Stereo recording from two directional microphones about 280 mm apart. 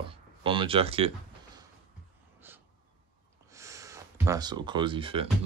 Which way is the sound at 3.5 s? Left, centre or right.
Centre.